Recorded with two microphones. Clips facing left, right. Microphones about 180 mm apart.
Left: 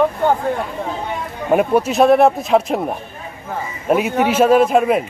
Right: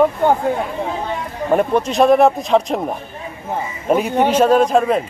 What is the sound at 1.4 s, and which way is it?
A man's voice, 5° left (ahead or behind).